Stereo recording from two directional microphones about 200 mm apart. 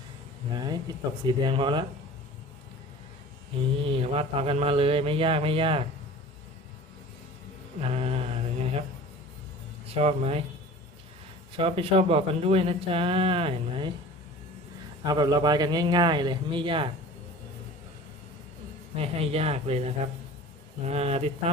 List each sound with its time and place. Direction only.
0.5 s speech: 20° right (ahead or behind)
3.8 s speech: 30° right (ahead or behind)
7.8 s mantra: 30° right (ahead or behind)
9.9 s speech: 30° right (ahead or behind)
11.5 s speech: 30° right (ahead or behind)
15.0 s speech: 20° right (ahead or behind)
18.9 s speech: 30° right (ahead or behind)